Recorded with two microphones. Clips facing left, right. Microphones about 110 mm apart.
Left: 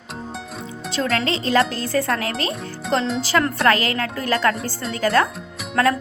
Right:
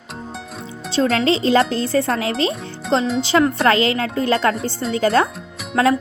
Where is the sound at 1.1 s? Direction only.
30° right (ahead or behind).